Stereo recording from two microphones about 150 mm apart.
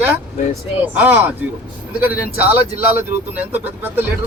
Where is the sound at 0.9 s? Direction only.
10° right (ahead or behind).